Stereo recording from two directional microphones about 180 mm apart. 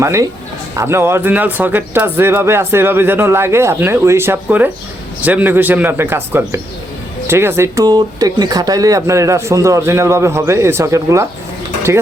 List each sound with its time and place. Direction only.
0.0 s speech: 15° right (ahead or behind)